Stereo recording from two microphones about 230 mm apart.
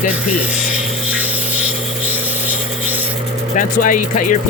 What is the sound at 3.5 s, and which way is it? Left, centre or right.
Speech, left.